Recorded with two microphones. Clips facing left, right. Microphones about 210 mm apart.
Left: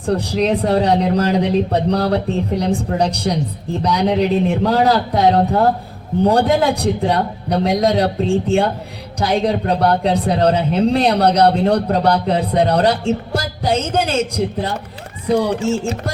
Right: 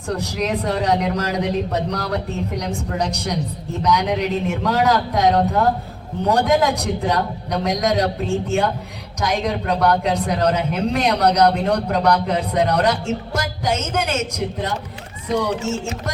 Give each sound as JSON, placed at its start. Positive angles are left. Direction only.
{"t": 0.0, "sound": "speech", "side_deg": 30}